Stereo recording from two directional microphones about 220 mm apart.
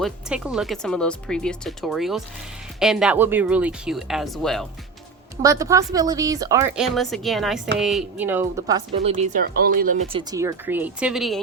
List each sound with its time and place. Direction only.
0.0 s speech: 5° right (ahead or behind)
5.4 s speech: 15° right (ahead or behind)
6.7 s speech: centre (ahead or behind)
9.0 s speech: 35° right (ahead or behind)
10.1 s speech: 20° right (ahead or behind); by 11.3 s centre (ahead or behind)